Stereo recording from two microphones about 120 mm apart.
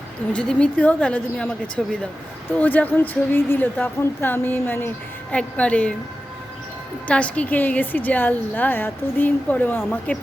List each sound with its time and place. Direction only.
0.3 s a woman's voice: 10° left (ahead or behind)
2.5 s a woman's voice: 15° left (ahead or behind)
7.1 s a woman's voice: 10° left (ahead or behind)